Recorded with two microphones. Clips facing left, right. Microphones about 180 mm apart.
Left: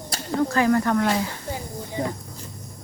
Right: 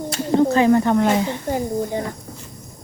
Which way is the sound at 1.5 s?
55° right (ahead or behind).